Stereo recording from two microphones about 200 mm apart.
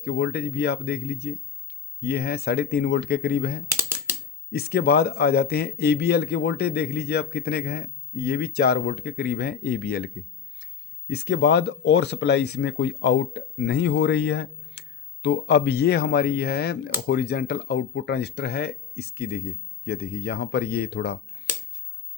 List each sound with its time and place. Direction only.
0.0 s a man's voice: 55° left (ahead or behind)
3.8 s typing: 10° right (ahead or behind)
4.5 s a man's voice: 50° left (ahead or behind)
11.1 s a man's voice: 55° left (ahead or behind)